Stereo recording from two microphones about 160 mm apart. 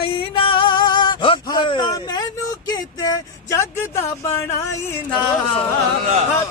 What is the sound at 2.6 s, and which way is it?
Speech, 25° left (ahead or behind).